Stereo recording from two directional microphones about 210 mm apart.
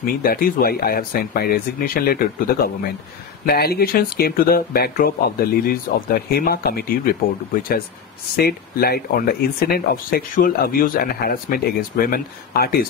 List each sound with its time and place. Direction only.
0.0 s speech: 45° left (ahead or behind)
8.4 s speech: 45° left (ahead or behind)